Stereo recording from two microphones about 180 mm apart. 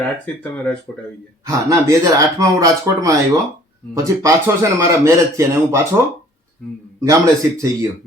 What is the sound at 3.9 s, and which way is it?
A man's voice, 15° right (ahead or behind).